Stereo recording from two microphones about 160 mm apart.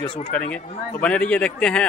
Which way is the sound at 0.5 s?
10° left (ahead or behind).